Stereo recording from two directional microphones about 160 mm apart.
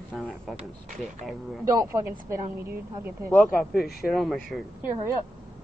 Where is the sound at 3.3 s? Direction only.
Centre (ahead or behind).